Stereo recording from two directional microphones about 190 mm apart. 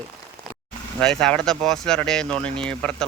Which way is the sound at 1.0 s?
5° left (ahead or behind).